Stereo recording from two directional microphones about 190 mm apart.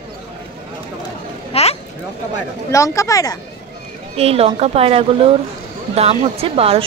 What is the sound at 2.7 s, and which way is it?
Speech, 15° left (ahead or behind).